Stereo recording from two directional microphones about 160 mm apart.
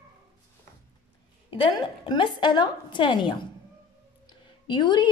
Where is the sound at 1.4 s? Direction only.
30° left (ahead or behind).